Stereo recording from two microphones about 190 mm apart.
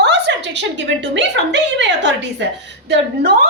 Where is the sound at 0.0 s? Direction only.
65° right (ahead or behind).